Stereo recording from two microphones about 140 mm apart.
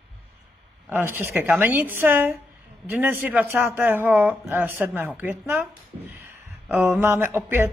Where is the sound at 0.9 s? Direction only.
15° right (ahead or behind).